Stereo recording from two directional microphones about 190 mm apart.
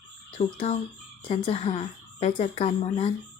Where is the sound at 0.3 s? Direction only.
35° left (ahead or behind).